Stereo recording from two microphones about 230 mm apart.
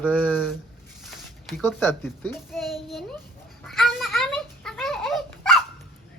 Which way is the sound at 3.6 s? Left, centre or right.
Centre.